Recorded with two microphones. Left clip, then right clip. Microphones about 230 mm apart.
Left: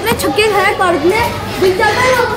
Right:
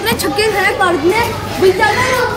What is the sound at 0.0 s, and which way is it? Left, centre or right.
Speech, centre.